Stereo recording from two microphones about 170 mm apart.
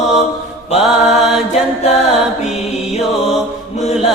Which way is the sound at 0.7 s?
40° left (ahead or behind).